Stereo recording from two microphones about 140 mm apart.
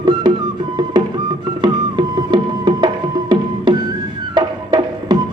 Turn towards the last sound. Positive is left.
turn(degrees=-30)  # may be behind; listen again after turning